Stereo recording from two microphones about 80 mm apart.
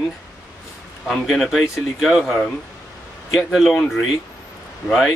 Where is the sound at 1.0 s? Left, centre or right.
Centre.